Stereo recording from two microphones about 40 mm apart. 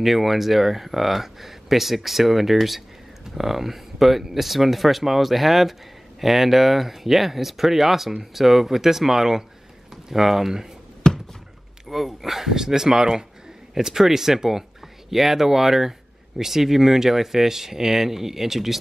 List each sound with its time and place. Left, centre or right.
0.0 s speech: centre
11.0 s a sound: centre
11.9 s speech: centre